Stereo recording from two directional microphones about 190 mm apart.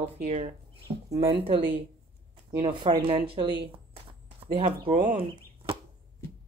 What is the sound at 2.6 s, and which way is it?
Speech, 30° right (ahead or behind).